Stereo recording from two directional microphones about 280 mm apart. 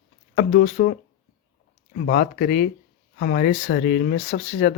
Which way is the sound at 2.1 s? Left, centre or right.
Left.